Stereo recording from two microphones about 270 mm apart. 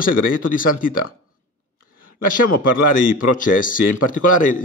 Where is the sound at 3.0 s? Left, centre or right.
Left.